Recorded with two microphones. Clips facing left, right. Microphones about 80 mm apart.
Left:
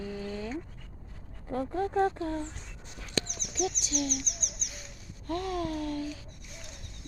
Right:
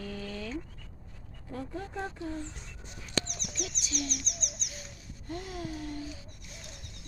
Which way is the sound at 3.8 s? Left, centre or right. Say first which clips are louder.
Left 4 dB; left.